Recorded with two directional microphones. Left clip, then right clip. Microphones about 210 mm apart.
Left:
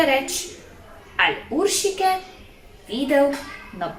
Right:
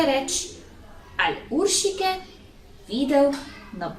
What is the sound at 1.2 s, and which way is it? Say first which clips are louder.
Speech: left 3 dB; 10° right (ahead or behind).